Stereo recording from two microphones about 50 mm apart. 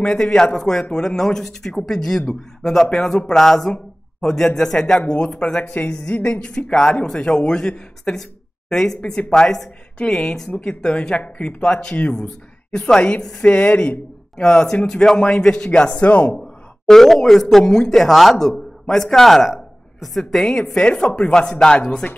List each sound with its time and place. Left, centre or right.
0.0 s a man's voice: centre
5.6 s a woman's voice: left
6.4 s speech: centre
16.3 s speech: centre
20.4 s speech: centre